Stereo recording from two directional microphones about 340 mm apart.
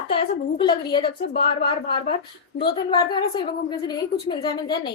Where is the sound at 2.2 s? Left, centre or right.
Left.